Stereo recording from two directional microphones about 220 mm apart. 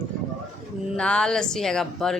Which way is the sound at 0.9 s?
5° left (ahead or behind).